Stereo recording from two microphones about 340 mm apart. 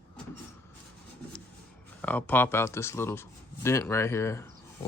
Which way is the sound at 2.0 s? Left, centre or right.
Centre.